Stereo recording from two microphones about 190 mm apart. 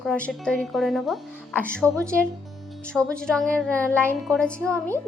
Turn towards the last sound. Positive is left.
turn(degrees=5)  # may be behind; listen again after turning